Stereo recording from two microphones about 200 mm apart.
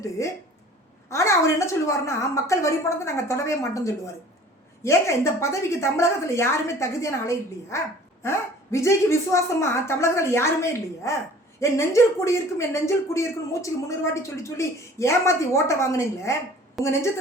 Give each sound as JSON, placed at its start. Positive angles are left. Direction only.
{"t": 0.2, "sound": "speech", "side_deg": 15}
{"t": 16.8, "sound": "a woman's voice", "side_deg": 0}